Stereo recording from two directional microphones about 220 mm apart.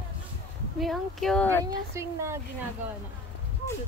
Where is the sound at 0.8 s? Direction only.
Centre (ahead or behind).